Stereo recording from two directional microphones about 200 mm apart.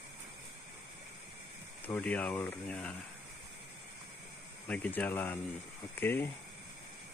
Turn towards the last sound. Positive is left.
turn(degrees=10)  # may be behind; listen again after turning